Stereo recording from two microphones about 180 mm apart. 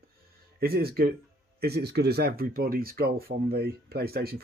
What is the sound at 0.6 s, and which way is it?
Speech, 60° right (ahead or behind).